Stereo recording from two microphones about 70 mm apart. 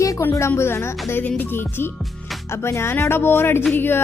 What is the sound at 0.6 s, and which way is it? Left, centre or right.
Speech, left.